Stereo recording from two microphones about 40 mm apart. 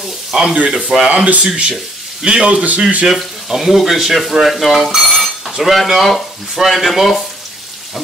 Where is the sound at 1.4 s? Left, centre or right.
Right.